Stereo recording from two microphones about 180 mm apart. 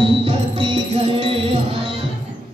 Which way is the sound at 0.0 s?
30° right (ahead or behind).